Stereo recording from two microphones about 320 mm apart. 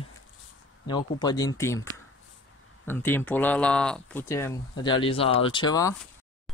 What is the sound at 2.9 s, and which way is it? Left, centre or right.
Speech, centre.